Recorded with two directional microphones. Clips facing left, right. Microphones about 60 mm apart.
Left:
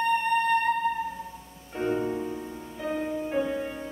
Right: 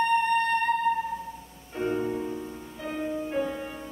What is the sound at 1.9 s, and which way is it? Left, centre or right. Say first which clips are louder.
Music: left 1 dB; centre.